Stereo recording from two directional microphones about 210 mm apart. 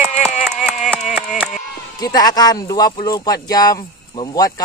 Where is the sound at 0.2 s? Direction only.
Centre (ahead or behind).